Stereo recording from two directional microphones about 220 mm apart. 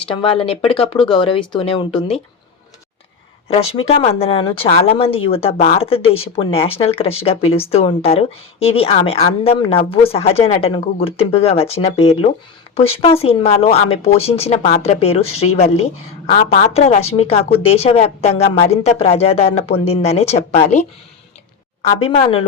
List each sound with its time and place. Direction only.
0.0 s speech: 25° left (ahead or behind)
3.5 s speech: 25° left (ahead or behind)
16.5 s speech: 30° left (ahead or behind)